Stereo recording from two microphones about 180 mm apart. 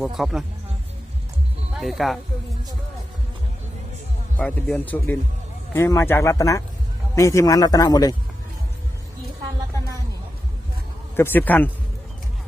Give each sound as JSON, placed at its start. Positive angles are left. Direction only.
{"t": 0.0, "sound": "speech", "side_deg": -5}
{"t": 1.8, "sound": "speech", "side_deg": 0}
{"t": 4.4, "sound": "speech", "side_deg": 10}
{"t": 11.2, "sound": "speech", "side_deg": 10}